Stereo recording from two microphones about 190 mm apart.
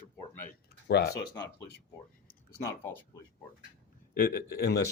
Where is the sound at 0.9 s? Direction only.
60° left (ahead or behind).